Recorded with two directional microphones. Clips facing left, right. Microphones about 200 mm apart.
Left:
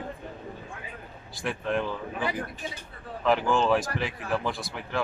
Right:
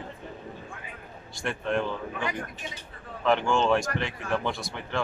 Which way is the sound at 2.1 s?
35° left (ahead or behind).